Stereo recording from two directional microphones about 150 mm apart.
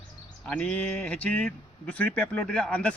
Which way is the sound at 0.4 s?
10° left (ahead or behind).